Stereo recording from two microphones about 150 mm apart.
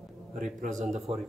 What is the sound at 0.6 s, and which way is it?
Speech, 55° right (ahead or behind).